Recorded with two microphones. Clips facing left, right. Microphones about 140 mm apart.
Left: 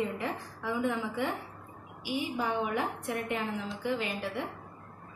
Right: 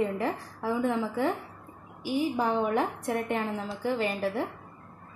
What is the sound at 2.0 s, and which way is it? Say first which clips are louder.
A woman's voice: right 5 dB; 45° right (ahead or behind).